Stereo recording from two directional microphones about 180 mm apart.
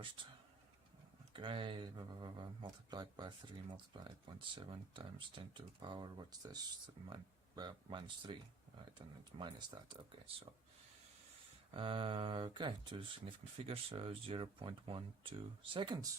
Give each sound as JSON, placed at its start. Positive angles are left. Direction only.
{"t": 1.3, "sound": "speech", "side_deg": -30}
{"t": 11.7, "sound": "speech", "side_deg": -30}